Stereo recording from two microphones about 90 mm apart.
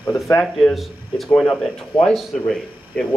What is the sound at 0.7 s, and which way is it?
Speech, centre (ahead or behind).